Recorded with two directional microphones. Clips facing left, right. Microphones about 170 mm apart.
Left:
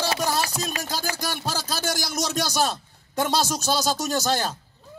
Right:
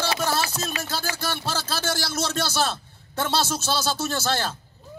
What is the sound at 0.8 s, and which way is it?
A man's voice, 15° left (ahead or behind).